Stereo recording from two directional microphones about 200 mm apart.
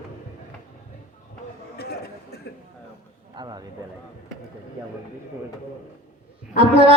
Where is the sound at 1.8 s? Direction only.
50° left (ahead or behind).